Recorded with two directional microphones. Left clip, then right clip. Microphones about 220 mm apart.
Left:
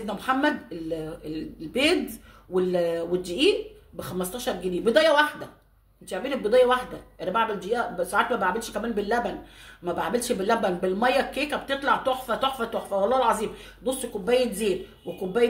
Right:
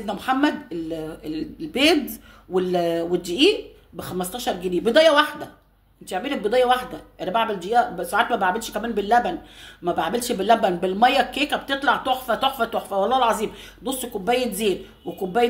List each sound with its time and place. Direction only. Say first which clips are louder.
0.0 s speech: right 3 dB; 30° right (ahead or behind)